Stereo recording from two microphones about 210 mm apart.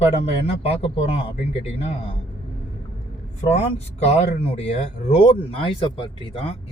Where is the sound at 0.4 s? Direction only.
30° left (ahead or behind).